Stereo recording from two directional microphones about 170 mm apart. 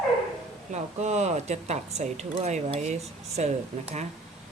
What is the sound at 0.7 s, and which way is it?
Speech, 40° right (ahead or behind).